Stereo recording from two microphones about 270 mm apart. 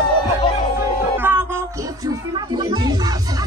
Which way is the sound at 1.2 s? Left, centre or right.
Centre.